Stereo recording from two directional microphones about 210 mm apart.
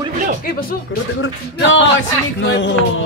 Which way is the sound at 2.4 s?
60° left (ahead or behind).